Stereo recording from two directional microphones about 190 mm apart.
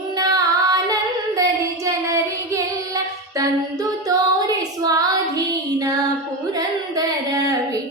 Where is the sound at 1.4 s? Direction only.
15° right (ahead or behind).